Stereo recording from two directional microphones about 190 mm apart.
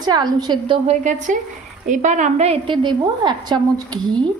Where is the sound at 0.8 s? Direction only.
40° right (ahead or behind).